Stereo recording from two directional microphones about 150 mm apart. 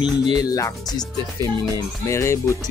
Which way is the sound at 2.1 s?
20° left (ahead or behind).